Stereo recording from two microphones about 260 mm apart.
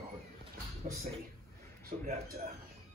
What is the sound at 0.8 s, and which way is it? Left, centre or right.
Speech, right.